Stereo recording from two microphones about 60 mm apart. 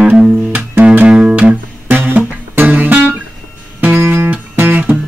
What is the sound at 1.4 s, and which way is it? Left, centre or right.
Music, right.